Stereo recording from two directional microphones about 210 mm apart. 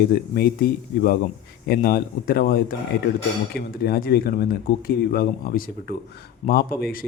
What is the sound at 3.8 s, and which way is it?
Speech, 45° left (ahead or behind).